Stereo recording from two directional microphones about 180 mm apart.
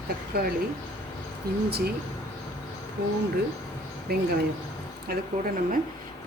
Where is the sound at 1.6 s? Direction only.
60° right (ahead or behind).